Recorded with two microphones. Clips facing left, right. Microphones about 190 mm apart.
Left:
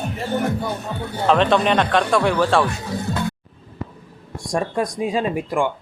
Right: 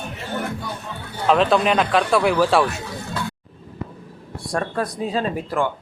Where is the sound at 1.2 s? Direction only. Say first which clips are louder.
Even; centre (ahead or behind).